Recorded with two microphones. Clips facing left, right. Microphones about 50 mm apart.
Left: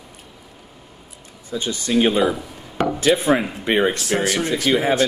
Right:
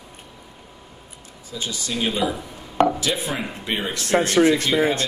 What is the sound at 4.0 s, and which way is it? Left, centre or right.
Speech, right.